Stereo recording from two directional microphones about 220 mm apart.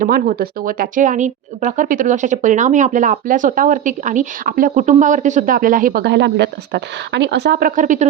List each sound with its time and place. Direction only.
0.0 s speech: 40° right (ahead or behind)